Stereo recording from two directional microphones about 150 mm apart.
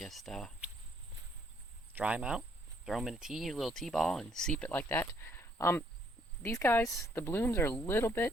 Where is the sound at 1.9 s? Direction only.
10° right (ahead or behind).